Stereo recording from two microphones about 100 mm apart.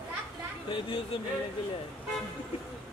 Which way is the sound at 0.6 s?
60° left (ahead or behind).